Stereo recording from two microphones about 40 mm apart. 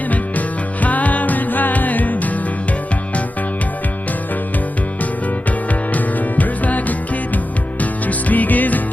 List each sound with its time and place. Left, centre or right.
0.8 s music: left
5.9 s music: left